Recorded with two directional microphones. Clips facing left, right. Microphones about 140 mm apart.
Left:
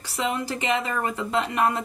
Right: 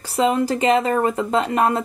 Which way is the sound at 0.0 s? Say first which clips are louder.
Right 9 dB; 45° right (ahead or behind).